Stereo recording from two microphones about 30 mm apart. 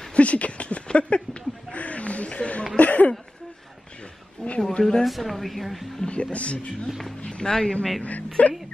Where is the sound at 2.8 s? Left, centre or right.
Left.